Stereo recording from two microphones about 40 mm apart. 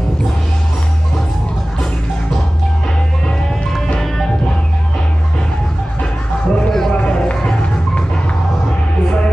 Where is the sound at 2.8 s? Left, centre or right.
Centre.